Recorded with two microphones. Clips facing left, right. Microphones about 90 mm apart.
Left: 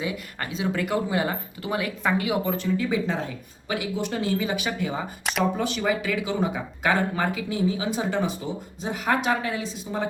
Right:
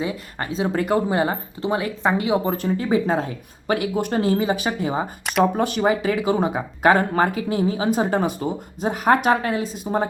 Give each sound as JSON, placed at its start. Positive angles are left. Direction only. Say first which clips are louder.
{"t": 0.0, "sound": "speech", "louder": "right 4 dB", "side_deg": -30}
{"t": 5.4, "sound": "speech", "louder": "right 6 dB", "side_deg": -50}